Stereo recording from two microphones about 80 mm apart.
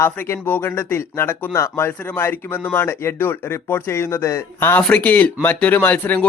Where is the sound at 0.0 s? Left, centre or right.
Left.